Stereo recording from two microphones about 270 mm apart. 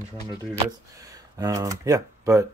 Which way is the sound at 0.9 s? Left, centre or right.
Centre.